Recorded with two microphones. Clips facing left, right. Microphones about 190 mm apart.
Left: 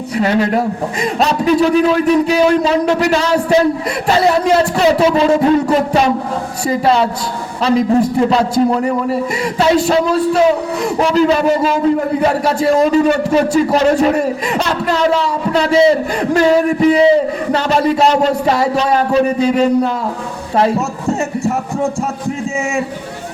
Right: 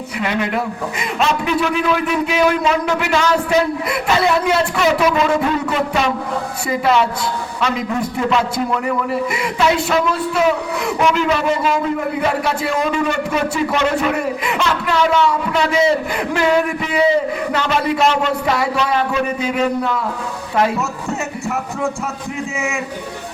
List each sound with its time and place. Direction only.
0.2 s a man's voice: 35° left (ahead or behind)